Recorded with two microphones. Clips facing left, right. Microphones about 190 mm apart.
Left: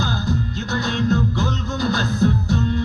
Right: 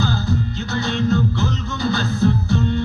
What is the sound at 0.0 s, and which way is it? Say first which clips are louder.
Music: right 2 dB; 45° left (ahead or behind).